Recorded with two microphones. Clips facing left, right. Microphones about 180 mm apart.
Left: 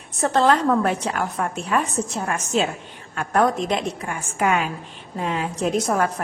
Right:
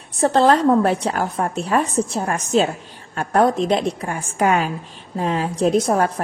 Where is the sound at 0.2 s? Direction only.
35° right (ahead or behind).